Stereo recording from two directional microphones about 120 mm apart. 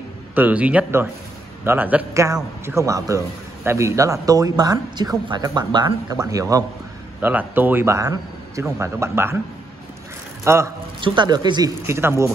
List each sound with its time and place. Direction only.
0.3 s a man's voice: 15° right (ahead or behind)
2.1 s a man's voice: 25° right (ahead or behind)
7.2 s a man's voice: 15° right (ahead or behind)
10.4 s a man's voice: 20° right (ahead or behind)
11.0 s speech: 40° right (ahead or behind)
11.8 s a man's voice: 20° right (ahead or behind)